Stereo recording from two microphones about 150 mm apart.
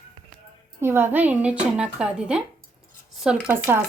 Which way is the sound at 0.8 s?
15° right (ahead or behind).